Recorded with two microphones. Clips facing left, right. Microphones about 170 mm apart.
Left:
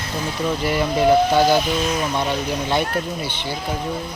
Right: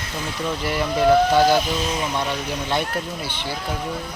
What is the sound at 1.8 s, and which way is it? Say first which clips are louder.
Speech: left 3 dB; 30° right (ahead or behind).